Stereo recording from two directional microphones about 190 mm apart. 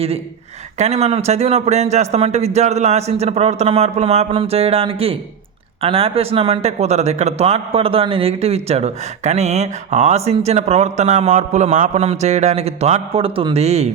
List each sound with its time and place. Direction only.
0.8 s speech: 35° right (ahead or behind)